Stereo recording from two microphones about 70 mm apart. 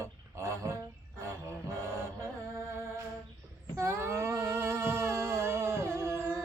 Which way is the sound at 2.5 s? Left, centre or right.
Right.